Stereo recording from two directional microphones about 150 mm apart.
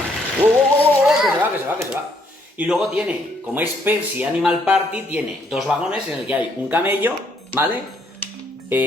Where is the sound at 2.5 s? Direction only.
5° right (ahead or behind).